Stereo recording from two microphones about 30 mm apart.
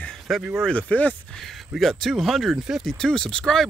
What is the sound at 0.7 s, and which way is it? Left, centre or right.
Speech, left.